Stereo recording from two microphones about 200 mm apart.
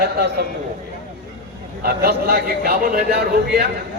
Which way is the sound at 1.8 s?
50° right (ahead or behind).